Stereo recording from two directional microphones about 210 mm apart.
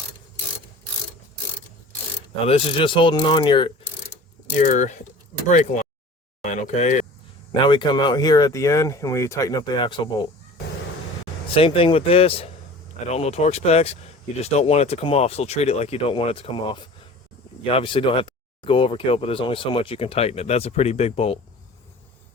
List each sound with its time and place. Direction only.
2.5 s speech: 25° left (ahead or behind)
4.6 s speech: 35° left (ahead or behind)
6.4 s a sound: 35° left (ahead or behind)
7.5 s speech: 20° left (ahead or behind)
11.5 s speech: 25° left (ahead or behind)